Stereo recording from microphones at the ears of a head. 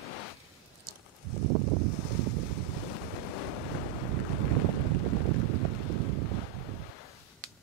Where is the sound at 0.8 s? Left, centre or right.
Right.